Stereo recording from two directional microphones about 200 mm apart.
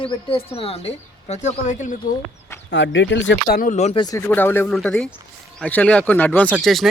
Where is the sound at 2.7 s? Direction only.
60° left (ahead or behind).